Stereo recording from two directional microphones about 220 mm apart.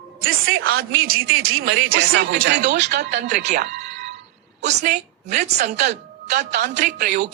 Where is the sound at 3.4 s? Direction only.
50° right (ahead or behind).